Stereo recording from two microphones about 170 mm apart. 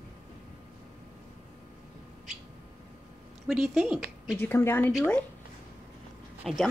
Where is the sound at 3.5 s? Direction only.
Centre (ahead or behind).